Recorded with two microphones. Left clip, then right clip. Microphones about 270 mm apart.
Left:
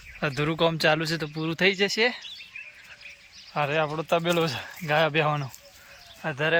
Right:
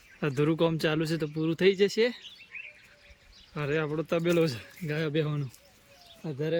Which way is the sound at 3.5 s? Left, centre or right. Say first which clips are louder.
Left 5 dB; centre.